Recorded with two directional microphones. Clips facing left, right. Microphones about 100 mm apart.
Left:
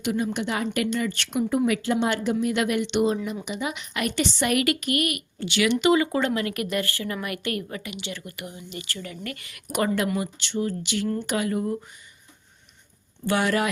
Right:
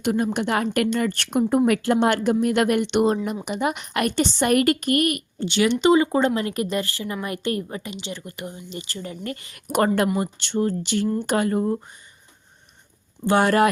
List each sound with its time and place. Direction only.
0.0 s a woman's voice: 50° right (ahead or behind)
5.4 s a woman's voice: 30° right (ahead or behind)
13.3 s speech: 45° right (ahead or behind)